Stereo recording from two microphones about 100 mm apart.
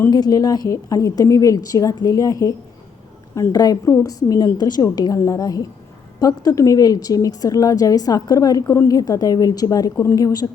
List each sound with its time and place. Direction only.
0.1 s speech: 40° left (ahead or behind)
8.6 s a woman's voice: 25° left (ahead or behind)
8.9 s speech: 40° left (ahead or behind)